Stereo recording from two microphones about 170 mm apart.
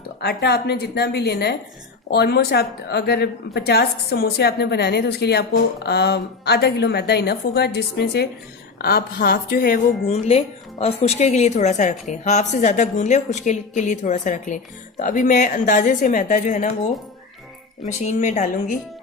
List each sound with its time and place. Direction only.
0.2 s a woman's voice: 70° left (ahead or behind)
8.8 s a woman's voice: 60° left (ahead or behind)
10.1 s a woman's voice: 35° left (ahead or behind)
17.8 s a woman's voice: 45° left (ahead or behind)